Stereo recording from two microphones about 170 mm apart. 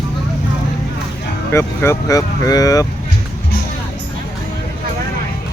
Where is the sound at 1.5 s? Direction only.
15° left (ahead or behind).